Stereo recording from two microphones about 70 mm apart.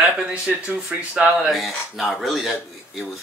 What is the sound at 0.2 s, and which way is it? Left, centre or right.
Speech, centre.